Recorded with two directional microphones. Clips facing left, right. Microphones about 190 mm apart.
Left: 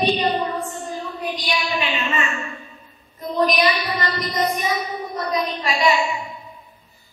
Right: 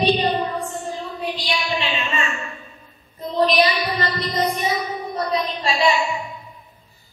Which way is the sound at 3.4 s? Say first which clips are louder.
Right 1 dB; 30° right (ahead or behind).